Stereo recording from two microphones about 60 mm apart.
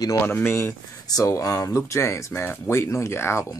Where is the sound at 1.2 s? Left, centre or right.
Left.